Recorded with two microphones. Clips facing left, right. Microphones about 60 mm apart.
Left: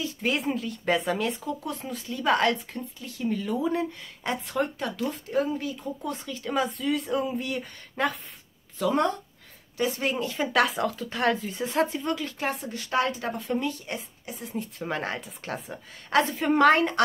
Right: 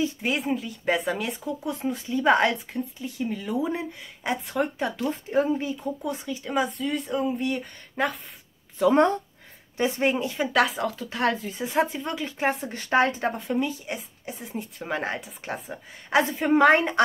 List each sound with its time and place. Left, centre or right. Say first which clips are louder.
0.2 s speech: right 1 dB; centre
1.9 s a woman's voice: right 4 dB; right; by 4.6 s centre
4.7 s speech: right 3 dB; right
6.0 s speech: right 2 dB; centre
8.7 s speech: right 5 dB; right
10.2 s a woman's voice: right 1 dB; centre
10.5 s a woman's voice: even; centre
12.2 s speech: right 4 dB; right
13.5 s a woman's voice: right 2 dB; centre